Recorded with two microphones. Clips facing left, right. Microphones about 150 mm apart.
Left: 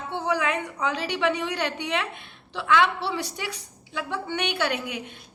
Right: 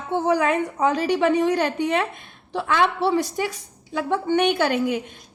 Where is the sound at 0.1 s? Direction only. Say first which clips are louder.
Right 6 dB; 45° right (ahead or behind).